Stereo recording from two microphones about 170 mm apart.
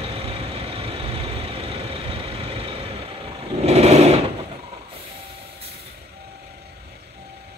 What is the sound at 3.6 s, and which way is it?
Sewing machine, 40° right (ahead or behind).